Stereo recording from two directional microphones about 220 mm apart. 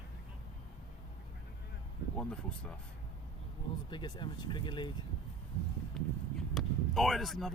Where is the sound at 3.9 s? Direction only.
20° left (ahead or behind).